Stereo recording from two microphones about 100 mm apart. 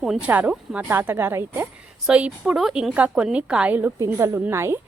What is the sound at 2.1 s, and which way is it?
A woman's voice, 10° right (ahead or behind).